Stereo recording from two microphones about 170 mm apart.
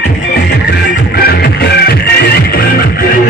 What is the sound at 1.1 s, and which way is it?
Music, 65° left (ahead or behind).